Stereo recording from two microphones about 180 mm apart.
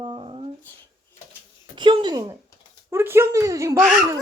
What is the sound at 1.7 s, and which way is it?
A woman's voice, 25° right (ahead or behind).